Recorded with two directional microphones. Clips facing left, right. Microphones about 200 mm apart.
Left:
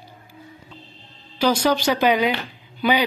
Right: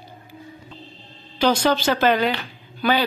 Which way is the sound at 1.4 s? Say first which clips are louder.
Even; 10° left (ahead or behind).